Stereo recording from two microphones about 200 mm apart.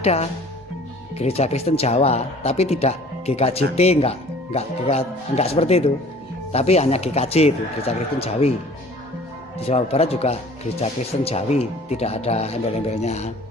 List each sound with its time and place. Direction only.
0.0 s speech: 30° left (ahead or behind)
9.6 s speech: 30° left (ahead or behind)